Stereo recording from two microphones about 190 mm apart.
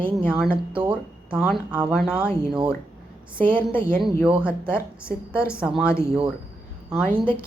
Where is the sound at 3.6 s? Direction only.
25° right (ahead or behind).